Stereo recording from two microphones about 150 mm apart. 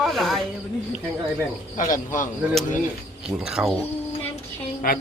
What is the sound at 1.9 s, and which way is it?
Speech, 60° left (ahead or behind).